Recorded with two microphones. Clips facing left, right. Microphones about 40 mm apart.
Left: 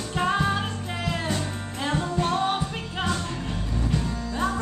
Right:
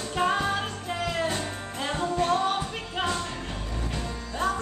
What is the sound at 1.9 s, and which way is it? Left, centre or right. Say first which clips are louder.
Music: even; centre.